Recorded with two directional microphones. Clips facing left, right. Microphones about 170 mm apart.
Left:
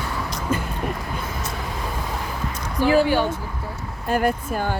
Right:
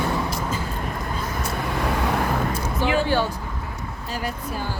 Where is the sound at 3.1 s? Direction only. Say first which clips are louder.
Left 2 dB; 15° left (ahead or behind).